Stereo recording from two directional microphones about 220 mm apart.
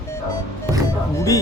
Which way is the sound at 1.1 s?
15° left (ahead or behind).